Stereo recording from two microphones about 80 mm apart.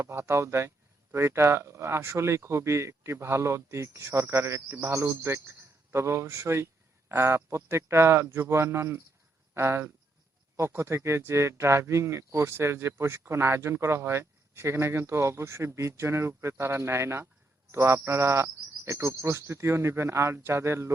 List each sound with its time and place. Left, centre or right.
0.1 s speech: right